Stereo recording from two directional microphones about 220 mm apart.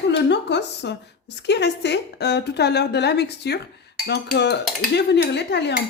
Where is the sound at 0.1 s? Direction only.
50° left (ahead or behind).